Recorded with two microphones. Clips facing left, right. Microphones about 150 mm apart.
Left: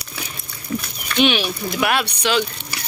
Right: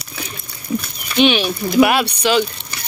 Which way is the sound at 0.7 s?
15° right (ahead or behind).